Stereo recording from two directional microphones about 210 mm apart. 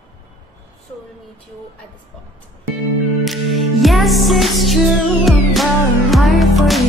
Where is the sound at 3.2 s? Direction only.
Centre (ahead or behind).